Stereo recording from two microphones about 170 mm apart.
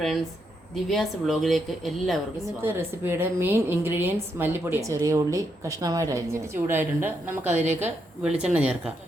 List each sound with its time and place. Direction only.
0.9 s a woman's voice: centre (ahead or behind)
2.6 s a woman's voice: 15° right (ahead or behind)
7.4 s a woman's voice: 45° right (ahead or behind)
7.8 s a woman's voice: 10° right (ahead or behind)